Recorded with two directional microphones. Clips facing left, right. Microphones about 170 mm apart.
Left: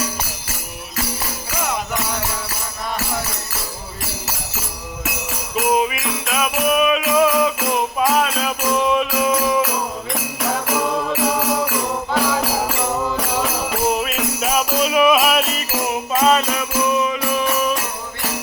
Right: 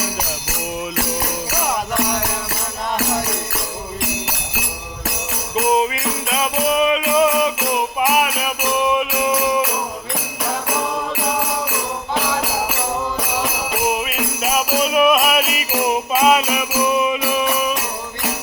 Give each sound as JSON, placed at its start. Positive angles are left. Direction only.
{"t": 5.5, "sound": "music", "side_deg": -25}
{"t": 12.1, "sound": "music", "side_deg": -15}
{"t": 13.9, "sound": "music", "side_deg": -5}